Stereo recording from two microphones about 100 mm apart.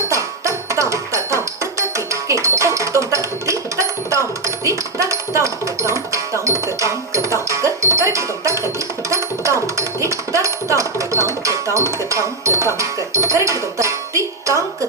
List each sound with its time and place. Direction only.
0.1 s music: 30° right (ahead or behind)
2.2 s a sound: 30° right (ahead or behind)
12.8 s music: 30° right (ahead or behind)